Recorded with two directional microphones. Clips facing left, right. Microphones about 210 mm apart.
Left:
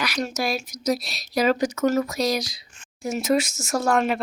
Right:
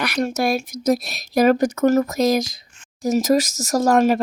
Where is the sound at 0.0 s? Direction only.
55° right (ahead or behind).